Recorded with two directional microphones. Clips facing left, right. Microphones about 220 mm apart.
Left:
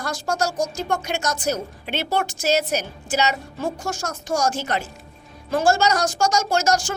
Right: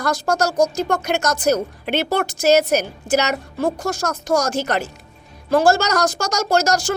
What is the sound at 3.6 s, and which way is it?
Speech, 35° right (ahead or behind).